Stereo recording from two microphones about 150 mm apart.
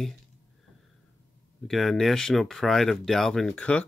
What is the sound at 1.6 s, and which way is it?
Speech, centre (ahead or behind).